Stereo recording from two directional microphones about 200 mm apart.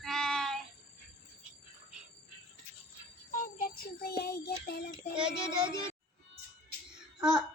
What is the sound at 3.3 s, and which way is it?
Music, 50° left (ahead or behind).